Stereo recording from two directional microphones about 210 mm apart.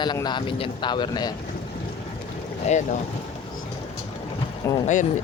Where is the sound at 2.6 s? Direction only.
35° left (ahead or behind).